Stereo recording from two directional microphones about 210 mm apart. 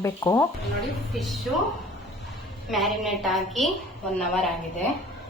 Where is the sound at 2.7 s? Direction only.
Centre (ahead or behind).